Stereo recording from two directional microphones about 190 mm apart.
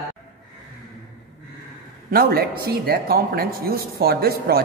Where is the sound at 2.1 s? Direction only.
50° right (ahead or behind).